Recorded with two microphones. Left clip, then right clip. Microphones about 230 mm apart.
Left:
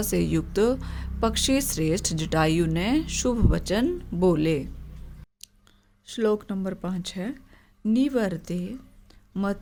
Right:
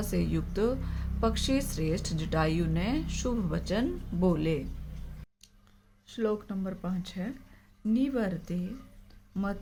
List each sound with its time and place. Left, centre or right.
0.0 s a woman's voice: left
6.1 s a woman's voice: left